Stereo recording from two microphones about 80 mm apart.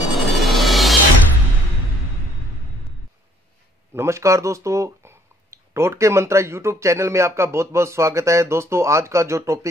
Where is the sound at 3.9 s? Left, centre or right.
Right.